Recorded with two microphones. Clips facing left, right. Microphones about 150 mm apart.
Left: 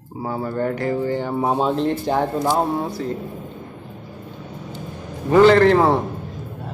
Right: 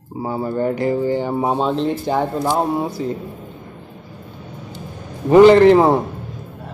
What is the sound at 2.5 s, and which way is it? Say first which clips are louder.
Speech: right 1 dB; 15° right (ahead or behind).